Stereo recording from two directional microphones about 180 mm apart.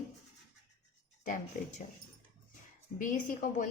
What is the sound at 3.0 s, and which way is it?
Speech, 45° left (ahead or behind).